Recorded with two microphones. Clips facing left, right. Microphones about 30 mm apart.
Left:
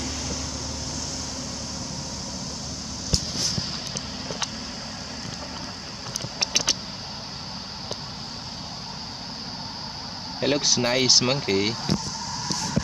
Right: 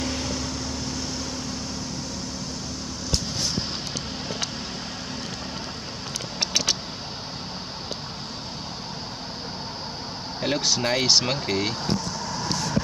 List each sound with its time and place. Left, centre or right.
0.0 s vehicle: right
6.4 s vehicle: centre
10.4 s speech: centre